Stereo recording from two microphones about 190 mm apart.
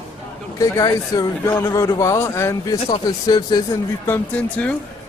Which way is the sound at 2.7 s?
25° left (ahead or behind).